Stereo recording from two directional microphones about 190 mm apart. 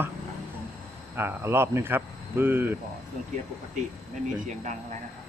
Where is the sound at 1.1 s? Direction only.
10° right (ahead or behind).